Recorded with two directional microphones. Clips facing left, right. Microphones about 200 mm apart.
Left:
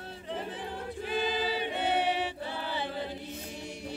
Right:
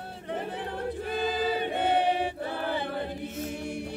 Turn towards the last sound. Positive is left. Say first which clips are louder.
# right 4 dB
turn(degrees=-55)  # may be behind; listen again after turning